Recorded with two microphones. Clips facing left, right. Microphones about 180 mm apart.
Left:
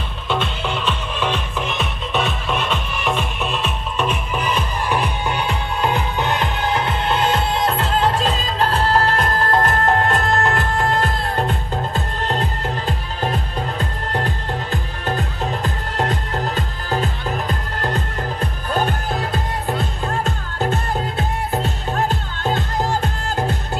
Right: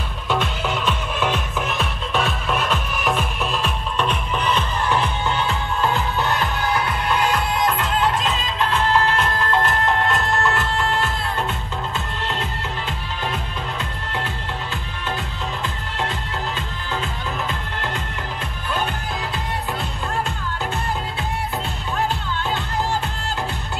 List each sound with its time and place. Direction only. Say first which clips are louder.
0.3 s music: even; 10° right (ahead or behind); by 23.5 s 45° left (ahead or behind)